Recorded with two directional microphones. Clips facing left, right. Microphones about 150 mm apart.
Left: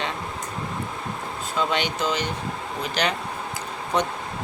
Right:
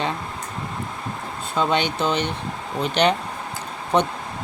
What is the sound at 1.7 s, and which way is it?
Speech, 30° right (ahead or behind).